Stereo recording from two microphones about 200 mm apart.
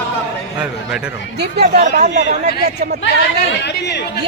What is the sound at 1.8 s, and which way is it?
Speech, 45° right (ahead or behind).